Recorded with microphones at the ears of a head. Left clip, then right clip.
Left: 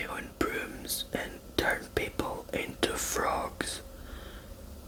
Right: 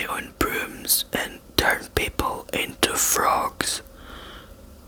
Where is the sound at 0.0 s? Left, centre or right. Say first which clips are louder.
Right 8 dB; right.